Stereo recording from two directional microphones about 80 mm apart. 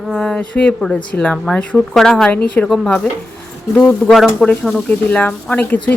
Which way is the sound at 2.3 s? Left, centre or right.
Centre.